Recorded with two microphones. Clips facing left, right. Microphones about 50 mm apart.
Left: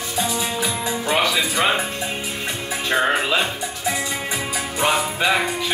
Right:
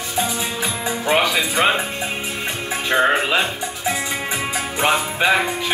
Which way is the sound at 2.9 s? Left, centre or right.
Centre.